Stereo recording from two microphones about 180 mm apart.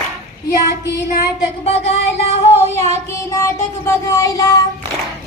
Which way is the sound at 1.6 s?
35° left (ahead or behind).